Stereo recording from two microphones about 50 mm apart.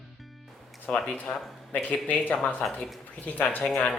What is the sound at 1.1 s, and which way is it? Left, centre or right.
Speech, left.